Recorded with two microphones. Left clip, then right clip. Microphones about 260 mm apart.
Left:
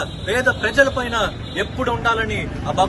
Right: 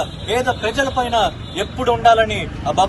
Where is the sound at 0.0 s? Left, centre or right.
Centre.